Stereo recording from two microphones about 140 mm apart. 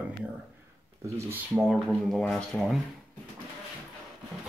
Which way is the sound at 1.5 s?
Centre (ahead or behind).